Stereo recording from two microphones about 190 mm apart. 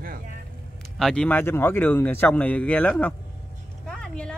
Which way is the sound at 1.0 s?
5° left (ahead or behind).